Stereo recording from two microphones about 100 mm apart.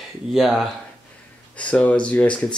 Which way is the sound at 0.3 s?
Centre (ahead or behind).